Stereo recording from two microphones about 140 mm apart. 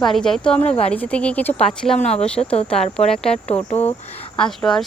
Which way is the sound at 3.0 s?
45° left (ahead or behind).